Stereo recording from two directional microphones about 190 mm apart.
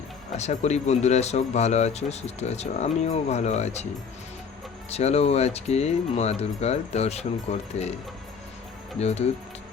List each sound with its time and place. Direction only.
0.3 s speech: 35° left (ahead or behind)
4.9 s speech: 35° left (ahead or behind)
9.0 s speech: 35° left (ahead or behind)